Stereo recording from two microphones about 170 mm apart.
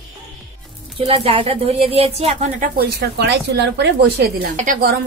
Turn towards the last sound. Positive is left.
turn(degrees=-55)  # may be behind; listen again after turning